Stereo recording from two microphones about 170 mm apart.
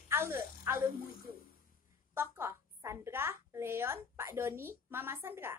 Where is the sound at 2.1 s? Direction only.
15° right (ahead or behind).